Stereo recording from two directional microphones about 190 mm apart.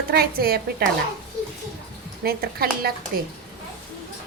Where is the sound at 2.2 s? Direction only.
55° right (ahead or behind).